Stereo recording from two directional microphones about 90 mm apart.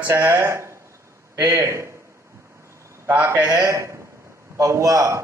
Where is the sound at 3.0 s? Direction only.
25° right (ahead or behind).